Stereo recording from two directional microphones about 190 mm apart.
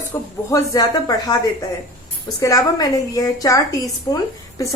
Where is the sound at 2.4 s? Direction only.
20° left (ahead or behind).